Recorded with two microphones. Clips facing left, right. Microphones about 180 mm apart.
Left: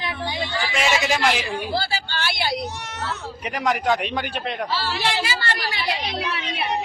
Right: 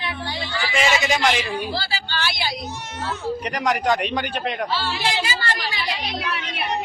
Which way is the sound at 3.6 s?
Centre (ahead or behind).